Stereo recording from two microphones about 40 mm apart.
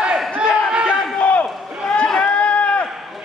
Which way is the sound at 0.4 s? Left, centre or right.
Right.